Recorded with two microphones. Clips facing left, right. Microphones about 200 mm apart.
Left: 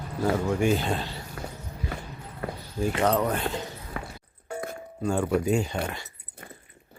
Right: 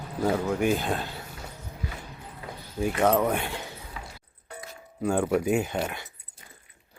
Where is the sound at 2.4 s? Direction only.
60° left (ahead or behind).